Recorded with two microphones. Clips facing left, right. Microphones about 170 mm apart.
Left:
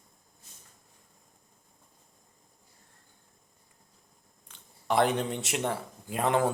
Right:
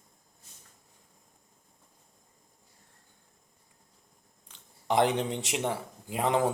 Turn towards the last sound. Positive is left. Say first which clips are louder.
# even
turn(degrees=-15)  # may be behind; listen again after turning